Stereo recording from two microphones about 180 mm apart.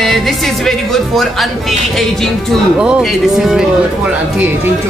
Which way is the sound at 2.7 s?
Centre (ahead or behind).